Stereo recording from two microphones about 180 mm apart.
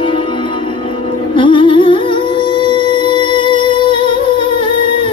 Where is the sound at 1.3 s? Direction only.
25° left (ahead or behind).